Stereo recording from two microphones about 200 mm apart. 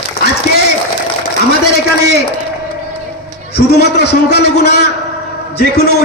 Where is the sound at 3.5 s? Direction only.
55° left (ahead or behind).